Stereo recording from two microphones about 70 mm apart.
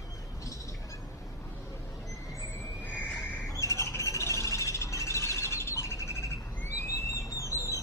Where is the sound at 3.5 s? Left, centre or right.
Left.